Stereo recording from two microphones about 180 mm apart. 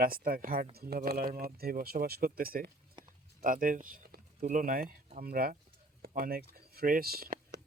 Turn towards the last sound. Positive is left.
turn(degrees=-55)  # may be behind; listen again after turning